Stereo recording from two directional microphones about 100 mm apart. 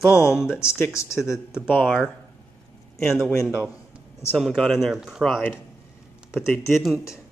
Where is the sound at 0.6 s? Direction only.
30° left (ahead or behind).